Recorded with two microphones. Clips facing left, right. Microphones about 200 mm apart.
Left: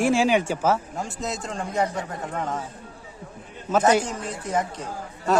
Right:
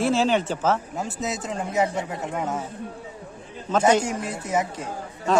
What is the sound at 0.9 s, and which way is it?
A man's voice, 5° right (ahead or behind).